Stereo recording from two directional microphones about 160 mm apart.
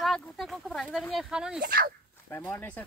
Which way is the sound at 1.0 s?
Centre (ahead or behind).